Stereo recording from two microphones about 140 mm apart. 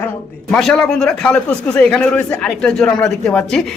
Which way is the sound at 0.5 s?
5° left (ahead or behind).